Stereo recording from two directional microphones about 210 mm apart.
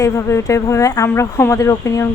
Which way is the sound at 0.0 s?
15° left (ahead or behind).